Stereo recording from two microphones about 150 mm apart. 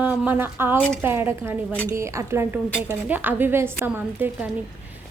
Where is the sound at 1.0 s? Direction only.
15° right (ahead or behind).